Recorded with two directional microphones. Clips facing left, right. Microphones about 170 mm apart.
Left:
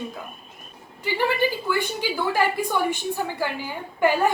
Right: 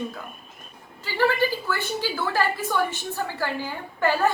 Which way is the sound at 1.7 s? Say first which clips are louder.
Left 2 dB; 15° left (ahead or behind).